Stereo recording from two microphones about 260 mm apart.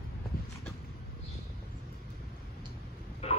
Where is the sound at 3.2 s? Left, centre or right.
Left.